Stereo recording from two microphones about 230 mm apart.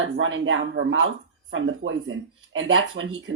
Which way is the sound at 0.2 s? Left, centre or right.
Right.